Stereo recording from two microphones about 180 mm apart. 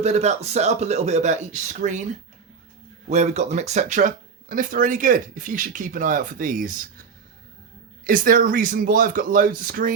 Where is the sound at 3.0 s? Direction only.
40° right (ahead or behind).